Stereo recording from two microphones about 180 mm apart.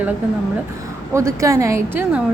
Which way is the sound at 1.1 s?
15° right (ahead or behind).